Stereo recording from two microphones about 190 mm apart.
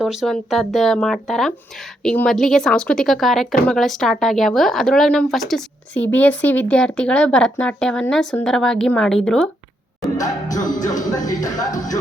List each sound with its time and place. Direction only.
0.0 s speech: centre (ahead or behind)
10.2 s music: 20° left (ahead or behind)